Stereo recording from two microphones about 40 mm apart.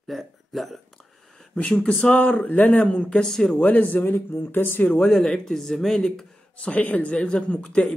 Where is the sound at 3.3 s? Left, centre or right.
Centre.